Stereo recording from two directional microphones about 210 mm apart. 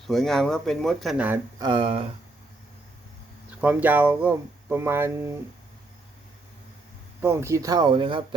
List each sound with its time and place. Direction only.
0.1 s speech: centre (ahead or behind)
1.5 s speech: 20° right (ahead or behind)
3.6 s speech: 10° right (ahead or behind)
7.2 s speech: 10° right (ahead or behind)